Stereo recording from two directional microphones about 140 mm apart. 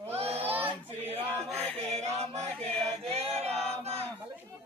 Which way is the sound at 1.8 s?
50° right (ahead or behind).